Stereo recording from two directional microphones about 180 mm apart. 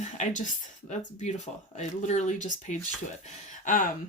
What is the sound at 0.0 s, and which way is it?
Speech, 45° left (ahead or behind).